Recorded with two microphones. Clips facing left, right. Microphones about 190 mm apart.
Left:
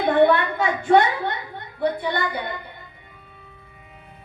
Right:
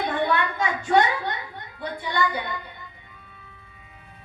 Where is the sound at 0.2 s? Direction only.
60° left (ahead or behind).